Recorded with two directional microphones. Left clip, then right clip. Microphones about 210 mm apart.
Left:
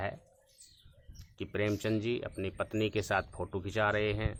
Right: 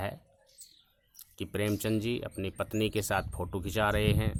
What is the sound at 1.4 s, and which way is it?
Speech, 45° right (ahead or behind).